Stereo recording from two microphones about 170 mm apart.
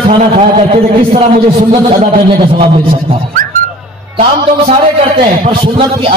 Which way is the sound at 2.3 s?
30° right (ahead or behind).